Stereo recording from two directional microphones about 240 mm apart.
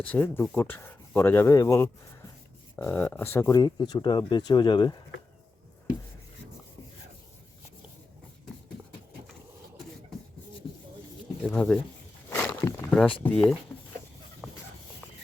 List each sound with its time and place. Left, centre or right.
0.0 s speech: centre
11.4 s speech: centre
12.3 s a sound: centre